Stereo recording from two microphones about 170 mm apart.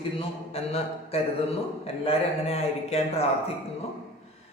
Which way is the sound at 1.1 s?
35° left (ahead or behind).